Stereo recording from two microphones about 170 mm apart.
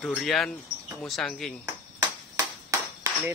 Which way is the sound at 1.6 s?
20° right (ahead or behind).